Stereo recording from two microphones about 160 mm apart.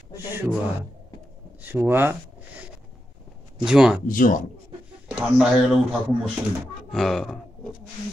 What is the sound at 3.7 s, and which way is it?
Speech, 5° right (ahead or behind).